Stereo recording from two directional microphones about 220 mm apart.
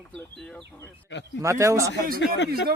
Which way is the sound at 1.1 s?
50° left (ahead or behind).